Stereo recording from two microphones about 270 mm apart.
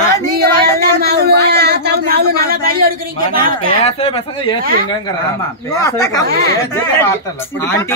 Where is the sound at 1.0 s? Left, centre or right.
Right.